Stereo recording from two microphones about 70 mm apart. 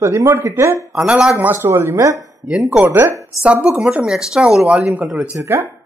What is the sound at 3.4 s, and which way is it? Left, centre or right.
A woman's voice, centre.